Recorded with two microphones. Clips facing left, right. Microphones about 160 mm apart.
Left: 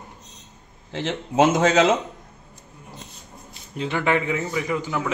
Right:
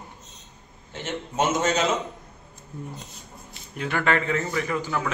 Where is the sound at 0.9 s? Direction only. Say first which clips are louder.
Left 6 dB; 90° left.